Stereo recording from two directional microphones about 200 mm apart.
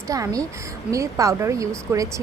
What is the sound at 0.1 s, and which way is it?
Speech, 15° right (ahead or behind).